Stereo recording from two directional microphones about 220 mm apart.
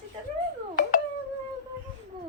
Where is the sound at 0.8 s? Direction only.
35° left (ahead or behind).